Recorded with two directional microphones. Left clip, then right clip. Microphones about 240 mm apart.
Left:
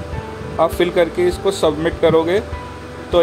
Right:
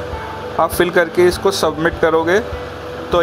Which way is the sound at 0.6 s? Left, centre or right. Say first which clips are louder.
Right 1 dB; centre.